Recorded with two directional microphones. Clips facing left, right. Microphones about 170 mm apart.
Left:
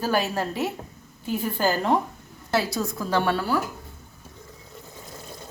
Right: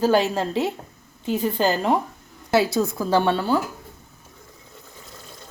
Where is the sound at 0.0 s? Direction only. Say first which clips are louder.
Right 5 dB; 20° right (ahead or behind).